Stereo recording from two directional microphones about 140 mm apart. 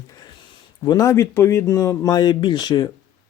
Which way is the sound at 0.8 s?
25° left (ahead or behind).